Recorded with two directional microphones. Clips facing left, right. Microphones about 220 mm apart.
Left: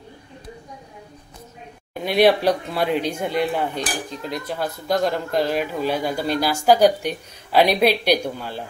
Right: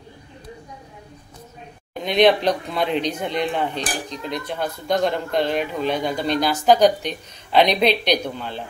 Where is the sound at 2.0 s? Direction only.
10° left (ahead or behind).